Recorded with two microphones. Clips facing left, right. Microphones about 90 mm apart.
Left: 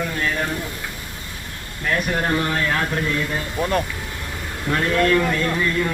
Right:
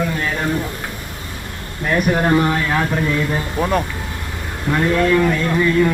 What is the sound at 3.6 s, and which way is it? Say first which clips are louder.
Speech: right 2 dB; centre (ahead or behind).